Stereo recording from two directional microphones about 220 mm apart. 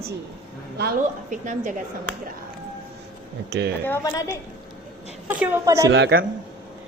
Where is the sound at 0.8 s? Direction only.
40° right (ahead or behind).